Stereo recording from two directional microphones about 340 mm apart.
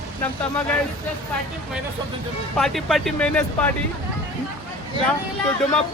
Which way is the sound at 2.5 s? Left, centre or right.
Centre.